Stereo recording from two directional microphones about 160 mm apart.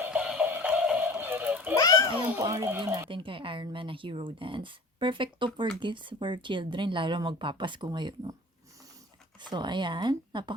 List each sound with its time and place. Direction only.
0.0 s music: 10° right (ahead or behind)
1.7 s a sound: 20° left (ahead or behind)
2.4 s speech: 20° right (ahead or behind)
3.1 s speech: 30° right (ahead or behind)
9.4 s speech: 30° right (ahead or behind)